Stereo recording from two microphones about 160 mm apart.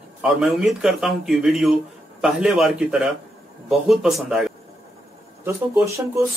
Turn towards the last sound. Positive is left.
turn(degrees=-20)  # may be behind; listen again after turning